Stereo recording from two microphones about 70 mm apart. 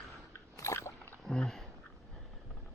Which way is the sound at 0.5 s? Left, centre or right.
Left.